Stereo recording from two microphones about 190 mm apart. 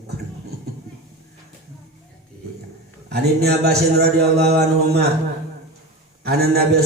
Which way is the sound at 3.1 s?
55° right (ahead or behind).